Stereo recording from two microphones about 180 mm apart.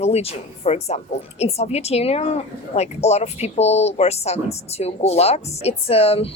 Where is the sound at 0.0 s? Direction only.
35° left (ahead or behind).